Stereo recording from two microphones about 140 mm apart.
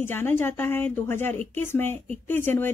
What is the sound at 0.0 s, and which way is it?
Speech, 15° left (ahead or behind).